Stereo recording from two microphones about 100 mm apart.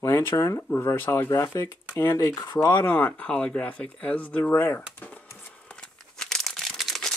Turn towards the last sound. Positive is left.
turn(degrees=5)  # may be behind; listen again after turning